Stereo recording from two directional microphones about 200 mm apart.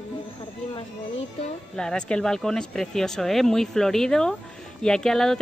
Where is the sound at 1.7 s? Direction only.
5° left (ahead or behind).